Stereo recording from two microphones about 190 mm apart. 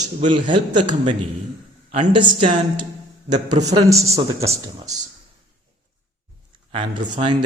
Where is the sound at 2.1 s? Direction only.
25° right (ahead or behind).